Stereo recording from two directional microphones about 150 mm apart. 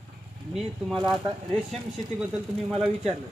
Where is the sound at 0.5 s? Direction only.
Centre (ahead or behind).